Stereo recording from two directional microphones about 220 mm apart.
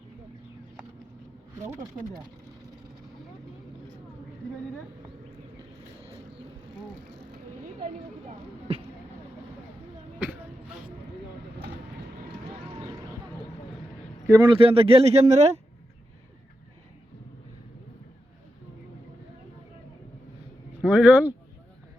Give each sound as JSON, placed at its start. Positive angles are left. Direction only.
{"t": 14.3, "sound": "speech", "side_deg": -20}
{"t": 20.8, "sound": "speech", "side_deg": -5}